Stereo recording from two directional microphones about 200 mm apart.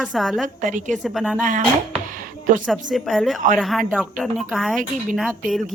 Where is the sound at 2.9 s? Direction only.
Centre (ahead or behind).